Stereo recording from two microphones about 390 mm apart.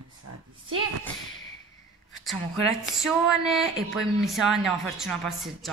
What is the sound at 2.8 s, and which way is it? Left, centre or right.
Speech, centre.